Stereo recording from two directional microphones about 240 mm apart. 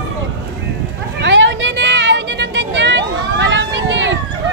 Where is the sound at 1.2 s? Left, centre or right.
Right.